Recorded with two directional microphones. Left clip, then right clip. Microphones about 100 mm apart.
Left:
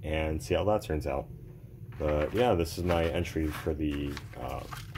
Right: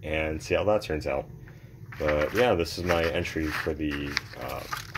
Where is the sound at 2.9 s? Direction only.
20° left (ahead or behind).